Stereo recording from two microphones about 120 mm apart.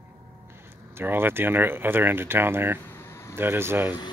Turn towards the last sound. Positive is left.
turn(degrees=-20)  # may be behind; listen again after turning